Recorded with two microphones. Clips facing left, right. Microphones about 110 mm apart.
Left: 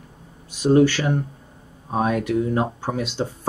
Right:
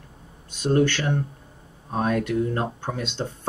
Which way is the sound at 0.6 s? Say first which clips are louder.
Left 5 dB; 10° left (ahead or behind).